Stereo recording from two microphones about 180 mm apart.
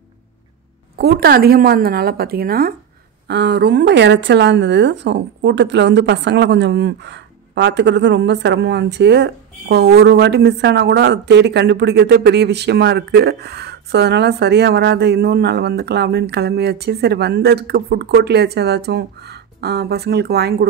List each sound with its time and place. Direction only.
0.9 s speech: 60° right (ahead or behind)
3.3 s speech: 70° right (ahead or behind)